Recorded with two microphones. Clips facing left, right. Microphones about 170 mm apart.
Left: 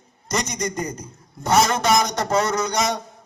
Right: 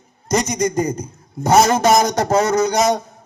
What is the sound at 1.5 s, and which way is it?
A man's voice, 45° right (ahead or behind).